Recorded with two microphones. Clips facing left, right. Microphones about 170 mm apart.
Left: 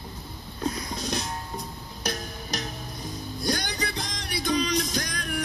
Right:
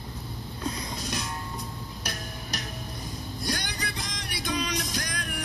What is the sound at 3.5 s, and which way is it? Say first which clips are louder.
Music: left 5 dB; 35° left (ahead or behind).